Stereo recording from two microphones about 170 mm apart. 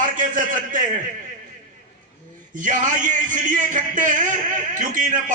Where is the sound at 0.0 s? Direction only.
50° right (ahead or behind).